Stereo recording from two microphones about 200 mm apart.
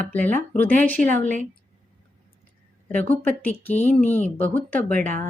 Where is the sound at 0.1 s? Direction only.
10° left (ahead or behind).